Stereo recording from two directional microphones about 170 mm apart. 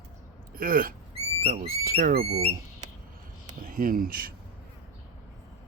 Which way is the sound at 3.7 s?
55° right (ahead or behind).